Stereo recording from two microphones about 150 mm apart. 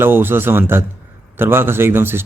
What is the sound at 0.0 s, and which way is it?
Speech, 15° right (ahead or behind).